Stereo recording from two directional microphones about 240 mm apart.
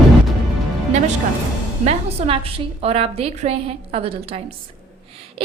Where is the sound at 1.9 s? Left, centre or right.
Right.